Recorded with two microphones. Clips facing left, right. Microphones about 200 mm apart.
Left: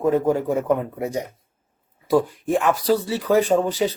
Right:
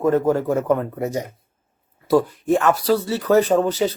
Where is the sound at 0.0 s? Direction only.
10° left (ahead or behind).